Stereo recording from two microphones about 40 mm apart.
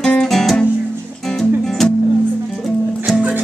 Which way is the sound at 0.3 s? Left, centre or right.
Centre.